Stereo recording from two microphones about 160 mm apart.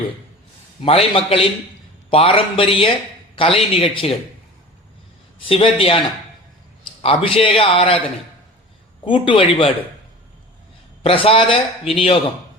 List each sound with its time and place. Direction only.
0.9 s speech: 35° left (ahead or behind)
5.5 s speech: 35° left (ahead or behind)
7.0 s speech: 35° left (ahead or behind)
9.0 s speech: 30° left (ahead or behind)
11.0 s speech: 35° left (ahead or behind)